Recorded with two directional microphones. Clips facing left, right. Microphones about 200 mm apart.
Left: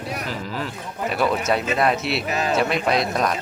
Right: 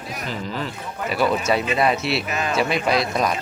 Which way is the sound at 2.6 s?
Centre (ahead or behind).